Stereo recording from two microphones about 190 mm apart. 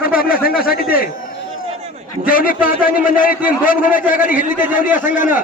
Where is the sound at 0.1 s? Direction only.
50° left (ahead or behind).